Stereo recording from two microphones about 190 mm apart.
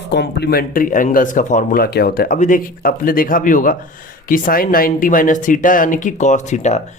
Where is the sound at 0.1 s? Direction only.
60° left (ahead or behind).